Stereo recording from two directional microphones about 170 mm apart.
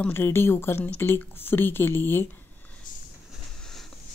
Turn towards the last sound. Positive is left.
turn(degrees=0)  # may be behind; listen again after turning